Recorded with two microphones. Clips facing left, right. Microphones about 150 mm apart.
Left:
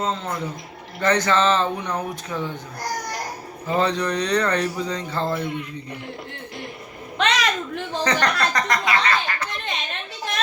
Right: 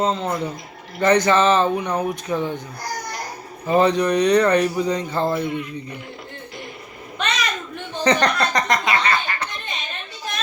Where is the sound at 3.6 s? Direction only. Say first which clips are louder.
Right 5 dB; 15° right (ahead or behind).